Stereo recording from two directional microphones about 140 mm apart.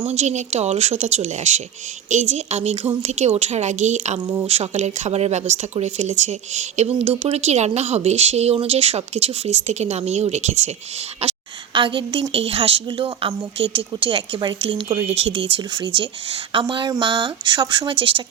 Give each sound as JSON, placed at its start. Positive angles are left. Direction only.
{"t": 0.1, "sound": "a woman's voice", "side_deg": -55}
{"t": 11.2, "sound": "a woman's voice", "side_deg": -40}